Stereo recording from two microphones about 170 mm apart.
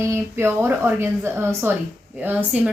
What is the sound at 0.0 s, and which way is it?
Speech, 15° right (ahead or behind).